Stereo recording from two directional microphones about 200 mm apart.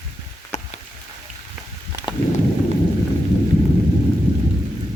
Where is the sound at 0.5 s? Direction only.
35° left (ahead or behind).